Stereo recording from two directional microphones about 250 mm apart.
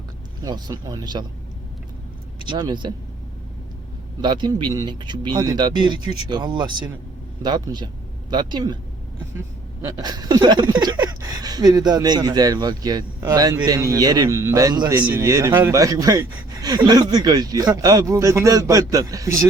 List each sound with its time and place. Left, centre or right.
0.4 s a man's voice: centre
2.5 s a man's voice: centre
4.2 s a man's voice: centre
9.8 s a man's voice: centre